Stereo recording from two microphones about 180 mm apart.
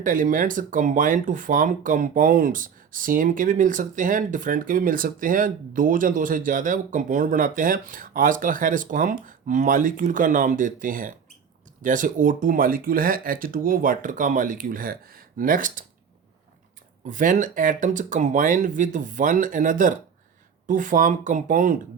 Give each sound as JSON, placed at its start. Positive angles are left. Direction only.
{"t": 0.0, "sound": "speech", "side_deg": -50}
{"t": 17.1, "sound": "speech", "side_deg": -45}